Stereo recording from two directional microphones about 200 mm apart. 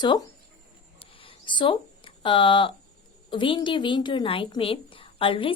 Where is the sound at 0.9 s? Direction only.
25° left (ahead or behind).